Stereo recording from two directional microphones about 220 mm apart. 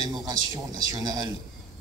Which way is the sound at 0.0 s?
20° right (ahead or behind).